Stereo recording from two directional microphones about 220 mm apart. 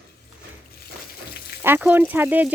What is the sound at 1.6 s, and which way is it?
Speech, 10° right (ahead or behind).